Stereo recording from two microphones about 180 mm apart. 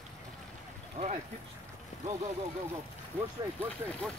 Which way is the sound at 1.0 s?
40° right (ahead or behind).